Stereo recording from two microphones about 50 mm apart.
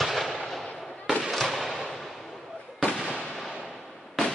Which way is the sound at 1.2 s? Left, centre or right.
Centre.